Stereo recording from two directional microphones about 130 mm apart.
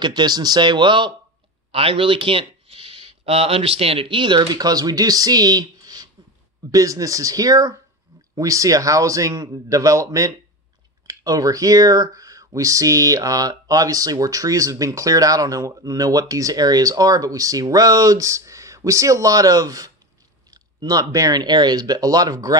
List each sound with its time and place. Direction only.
0.0 s speech: 35° right (ahead or behind)